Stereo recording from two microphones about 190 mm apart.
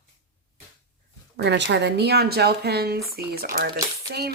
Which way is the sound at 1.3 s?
65° right (ahead or behind).